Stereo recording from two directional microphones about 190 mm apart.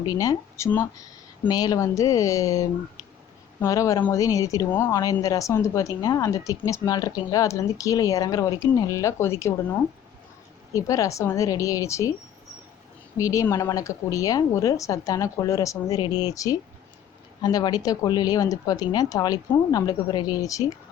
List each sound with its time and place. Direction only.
0.0 s speech: 20° left (ahead or behind)
10.8 s speech: 15° left (ahead or behind)
13.1 s speech: 15° left (ahead or behind)